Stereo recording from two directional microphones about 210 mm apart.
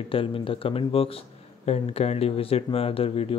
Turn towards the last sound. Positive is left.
turn(degrees=25)  # may be behind; listen again after turning